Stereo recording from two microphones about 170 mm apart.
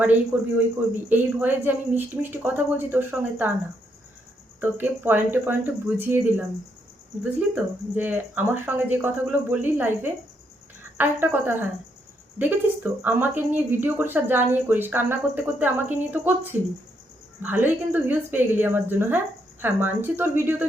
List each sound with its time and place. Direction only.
0.3 s speech: 10° right (ahead or behind)
4.6 s speech: 10° right (ahead or behind)